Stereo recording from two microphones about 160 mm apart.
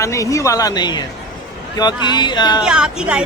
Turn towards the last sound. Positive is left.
turn(degrees=-5)  # may be behind; listen again after turning